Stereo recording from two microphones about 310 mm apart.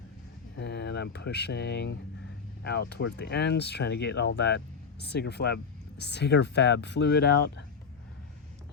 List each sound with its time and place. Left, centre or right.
0.5 s speech: left